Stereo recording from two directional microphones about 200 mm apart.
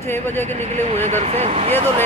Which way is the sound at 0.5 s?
35° right (ahead or behind).